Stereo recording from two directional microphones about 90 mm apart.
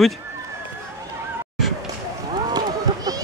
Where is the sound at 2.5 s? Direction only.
50° right (ahead or behind).